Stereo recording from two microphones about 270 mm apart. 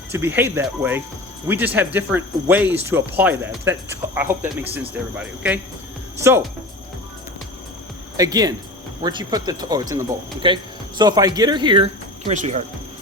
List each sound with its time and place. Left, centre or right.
0.1 s speech: centre
8.1 s speech: centre